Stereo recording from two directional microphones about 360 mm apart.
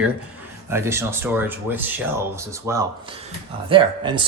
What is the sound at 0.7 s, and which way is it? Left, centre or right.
Speech, centre.